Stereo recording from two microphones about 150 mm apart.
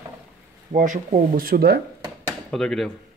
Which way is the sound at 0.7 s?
60° right (ahead or behind).